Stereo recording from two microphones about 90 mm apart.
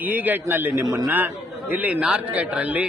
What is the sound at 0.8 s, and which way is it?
Speech, 35° right (ahead or behind).